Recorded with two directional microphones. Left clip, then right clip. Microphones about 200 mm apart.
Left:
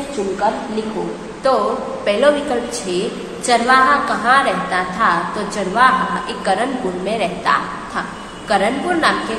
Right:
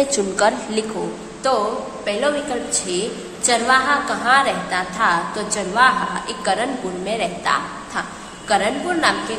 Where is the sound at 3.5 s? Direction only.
10° right (ahead or behind).